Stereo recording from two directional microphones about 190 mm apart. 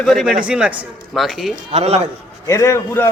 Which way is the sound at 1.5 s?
35° right (ahead or behind).